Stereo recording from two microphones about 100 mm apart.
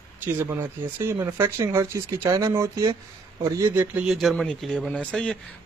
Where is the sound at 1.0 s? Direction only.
25° right (ahead or behind).